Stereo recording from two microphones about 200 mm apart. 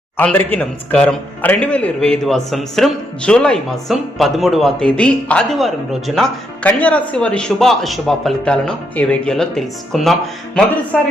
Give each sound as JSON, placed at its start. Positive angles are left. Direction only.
{"t": 0.2, "sound": "a man's voice", "side_deg": 10}